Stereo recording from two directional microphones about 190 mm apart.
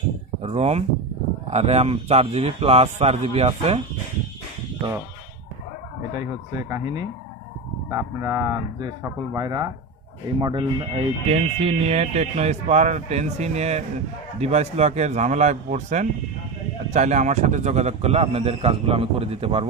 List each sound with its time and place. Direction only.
0.4 s speech: 35° right (ahead or behind)
6.7 s speech: 20° right (ahead or behind)